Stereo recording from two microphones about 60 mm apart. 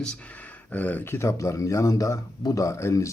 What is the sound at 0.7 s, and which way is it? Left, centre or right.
Speech, left.